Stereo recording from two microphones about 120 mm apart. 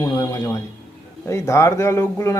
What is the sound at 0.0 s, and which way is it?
Speech, 25° left (ahead or behind).